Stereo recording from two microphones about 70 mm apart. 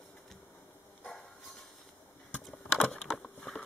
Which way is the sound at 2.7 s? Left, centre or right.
Centre.